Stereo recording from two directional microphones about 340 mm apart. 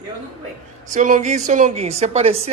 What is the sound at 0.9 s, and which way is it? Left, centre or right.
Speech, right.